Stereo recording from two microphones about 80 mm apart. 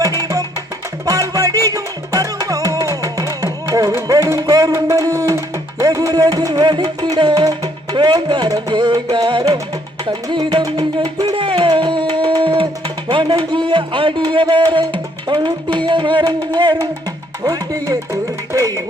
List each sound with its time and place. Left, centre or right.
0.2 s music: right
10.1 s music: right
13.1 s speech: right
15.9 s music: right
16.2 s music: right
17.4 s music: right